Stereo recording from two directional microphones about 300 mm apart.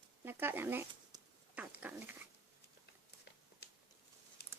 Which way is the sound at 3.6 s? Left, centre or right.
Left.